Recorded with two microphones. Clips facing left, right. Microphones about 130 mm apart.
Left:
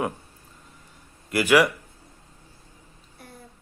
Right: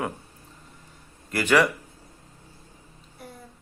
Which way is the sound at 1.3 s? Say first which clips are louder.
Left 2 dB; 10° left (ahead or behind).